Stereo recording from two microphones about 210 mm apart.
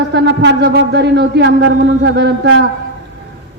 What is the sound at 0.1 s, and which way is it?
A man's voice, 55° right (ahead or behind).